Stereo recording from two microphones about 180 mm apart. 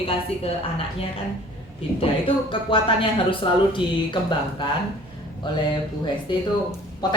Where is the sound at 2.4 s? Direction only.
30° left (ahead or behind).